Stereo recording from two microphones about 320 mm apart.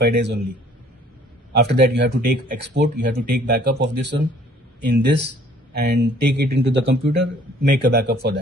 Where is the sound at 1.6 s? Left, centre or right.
Right.